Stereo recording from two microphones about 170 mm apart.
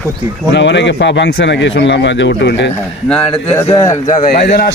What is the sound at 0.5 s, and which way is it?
A man's voice, 90° left.